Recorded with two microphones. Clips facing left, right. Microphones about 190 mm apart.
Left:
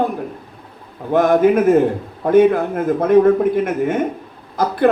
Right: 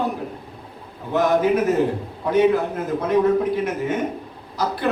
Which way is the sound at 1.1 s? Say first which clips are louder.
Left 5 dB; 50° left (ahead or behind).